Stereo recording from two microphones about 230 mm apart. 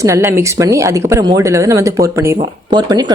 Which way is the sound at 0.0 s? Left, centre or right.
Centre.